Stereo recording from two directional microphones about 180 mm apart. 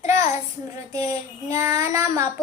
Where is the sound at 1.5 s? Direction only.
15° right (ahead or behind).